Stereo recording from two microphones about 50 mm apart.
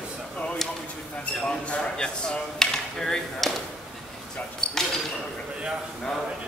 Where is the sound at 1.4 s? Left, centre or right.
Left.